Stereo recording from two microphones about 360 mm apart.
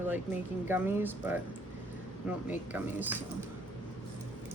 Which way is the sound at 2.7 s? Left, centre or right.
Centre.